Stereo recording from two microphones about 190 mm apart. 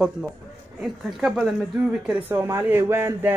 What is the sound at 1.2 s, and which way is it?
Speech, centre (ahead or behind).